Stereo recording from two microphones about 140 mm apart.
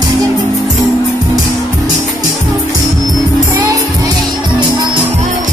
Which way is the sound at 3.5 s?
25° right (ahead or behind).